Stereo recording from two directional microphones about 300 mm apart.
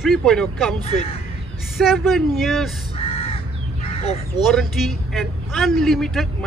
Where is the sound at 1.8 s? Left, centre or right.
Centre.